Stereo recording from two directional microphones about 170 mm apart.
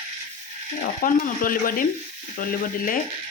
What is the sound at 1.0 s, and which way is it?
Frying, 55° left (ahead or behind).